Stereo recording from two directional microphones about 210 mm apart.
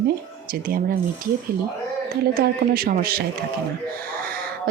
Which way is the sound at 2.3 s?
45° right (ahead or behind).